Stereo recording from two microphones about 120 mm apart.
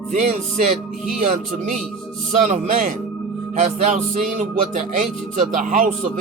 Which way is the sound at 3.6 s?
80° right.